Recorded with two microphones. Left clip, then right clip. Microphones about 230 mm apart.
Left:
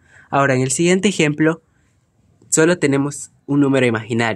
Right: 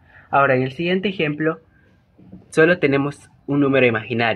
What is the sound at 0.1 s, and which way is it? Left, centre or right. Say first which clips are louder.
Speech: even; left.